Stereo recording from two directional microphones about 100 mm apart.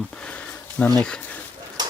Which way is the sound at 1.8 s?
45° right (ahead or behind).